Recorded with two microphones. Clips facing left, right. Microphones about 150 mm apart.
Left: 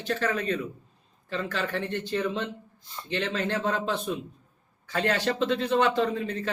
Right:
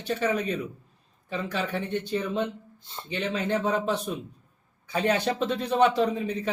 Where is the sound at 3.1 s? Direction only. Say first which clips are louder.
Right 1 dB; 10° right (ahead or behind).